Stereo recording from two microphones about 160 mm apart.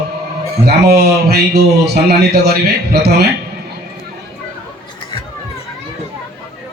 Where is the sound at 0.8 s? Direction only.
90° right.